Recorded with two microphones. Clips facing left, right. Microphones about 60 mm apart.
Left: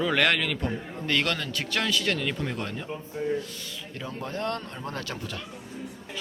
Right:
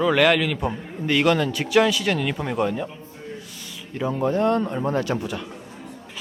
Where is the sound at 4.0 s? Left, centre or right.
Centre.